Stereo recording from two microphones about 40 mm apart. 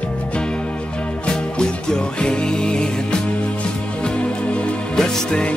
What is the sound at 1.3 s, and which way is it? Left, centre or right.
Music, left.